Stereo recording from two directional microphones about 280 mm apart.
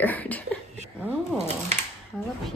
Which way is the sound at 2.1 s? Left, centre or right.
Centre.